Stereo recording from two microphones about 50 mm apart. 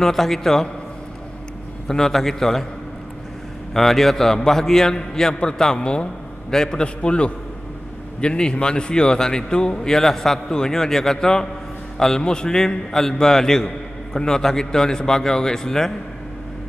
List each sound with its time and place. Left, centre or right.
0.0 s a man's voice: centre
1.9 s a man's voice: centre
3.7 s a man's voice: centre